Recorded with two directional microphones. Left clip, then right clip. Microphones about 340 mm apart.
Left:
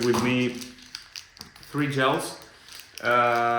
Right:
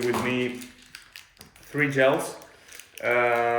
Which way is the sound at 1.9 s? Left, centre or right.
Centre.